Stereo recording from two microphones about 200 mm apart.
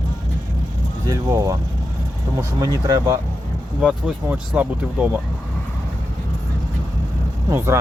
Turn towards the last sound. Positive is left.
turn(degrees=-15)  # may be behind; listen again after turning